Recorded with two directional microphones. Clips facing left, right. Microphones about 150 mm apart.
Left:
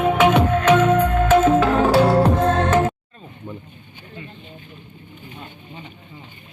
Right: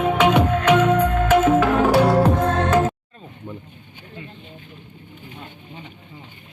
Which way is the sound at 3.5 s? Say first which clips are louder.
Left 1 dB; 15° left (ahead or behind).